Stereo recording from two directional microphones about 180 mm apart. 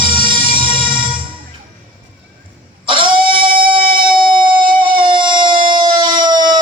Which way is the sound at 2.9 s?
30° right (ahead or behind).